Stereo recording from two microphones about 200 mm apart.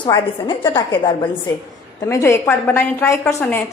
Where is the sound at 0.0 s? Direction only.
25° left (ahead or behind).